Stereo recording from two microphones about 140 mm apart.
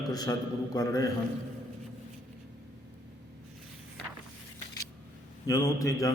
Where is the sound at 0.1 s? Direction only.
25° left (ahead or behind).